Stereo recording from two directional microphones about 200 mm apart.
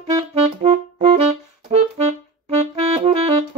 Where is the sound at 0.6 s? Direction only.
30° right (ahead or behind).